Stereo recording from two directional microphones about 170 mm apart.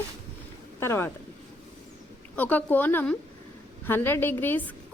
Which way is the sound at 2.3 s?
10° left (ahead or behind).